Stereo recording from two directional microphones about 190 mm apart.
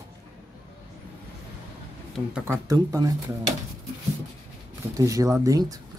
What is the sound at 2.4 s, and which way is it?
Speech, 15° right (ahead or behind).